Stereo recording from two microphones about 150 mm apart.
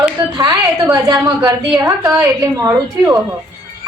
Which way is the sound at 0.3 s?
25° right (ahead or behind).